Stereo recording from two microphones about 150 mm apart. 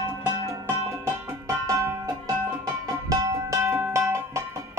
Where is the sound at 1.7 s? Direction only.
20° right (ahead or behind).